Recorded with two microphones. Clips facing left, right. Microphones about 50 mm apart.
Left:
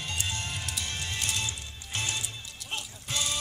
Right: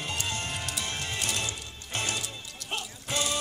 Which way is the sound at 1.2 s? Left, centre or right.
Centre.